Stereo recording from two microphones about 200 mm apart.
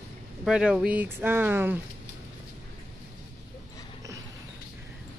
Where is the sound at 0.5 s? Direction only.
5° right (ahead or behind).